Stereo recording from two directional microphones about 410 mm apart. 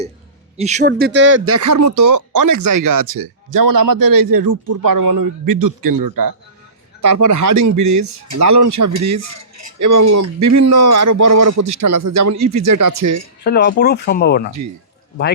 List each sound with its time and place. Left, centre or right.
0.5 s speech: centre; by 11.6 s right
11.6 s speech: right
13.4 s speech: left